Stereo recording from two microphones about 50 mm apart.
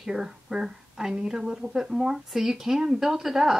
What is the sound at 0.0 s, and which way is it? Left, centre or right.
A woman's voice, centre.